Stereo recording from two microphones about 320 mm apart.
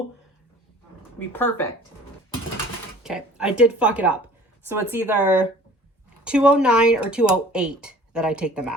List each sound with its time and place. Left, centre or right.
1.3 s speech: centre
3.0 s speech: centre